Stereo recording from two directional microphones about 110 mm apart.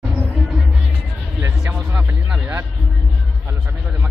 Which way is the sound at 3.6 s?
10° right (ahead or behind).